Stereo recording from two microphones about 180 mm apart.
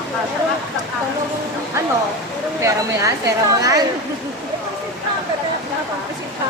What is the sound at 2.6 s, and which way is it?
A woman's voice, 15° right (ahead or behind).